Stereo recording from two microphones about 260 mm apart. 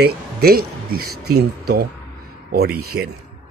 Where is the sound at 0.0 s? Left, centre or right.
Right.